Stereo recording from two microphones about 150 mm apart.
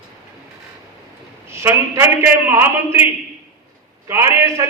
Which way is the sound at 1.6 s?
15° right (ahead or behind).